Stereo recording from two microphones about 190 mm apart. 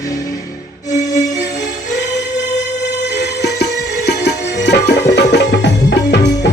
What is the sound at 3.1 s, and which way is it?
Music, 60° left (ahead or behind).